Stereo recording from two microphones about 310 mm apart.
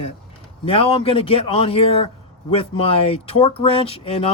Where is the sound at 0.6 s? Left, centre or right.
Centre.